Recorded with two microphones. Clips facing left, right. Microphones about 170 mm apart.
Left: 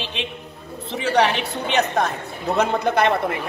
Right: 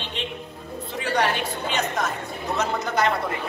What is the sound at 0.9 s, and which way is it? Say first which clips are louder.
Speech: left 5 dB; 75° left (ahead or behind).